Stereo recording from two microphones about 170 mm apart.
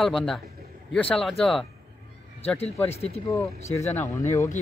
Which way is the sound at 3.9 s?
15° left (ahead or behind).